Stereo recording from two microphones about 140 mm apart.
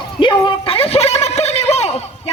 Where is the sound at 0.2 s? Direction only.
35° left (ahead or behind).